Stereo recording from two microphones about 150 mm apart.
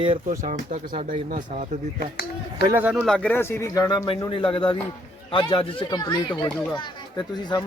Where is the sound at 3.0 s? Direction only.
5° left (ahead or behind); by 4.0 s 25° left (ahead or behind).